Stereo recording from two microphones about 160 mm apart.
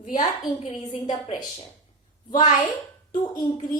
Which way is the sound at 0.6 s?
45° left (ahead or behind).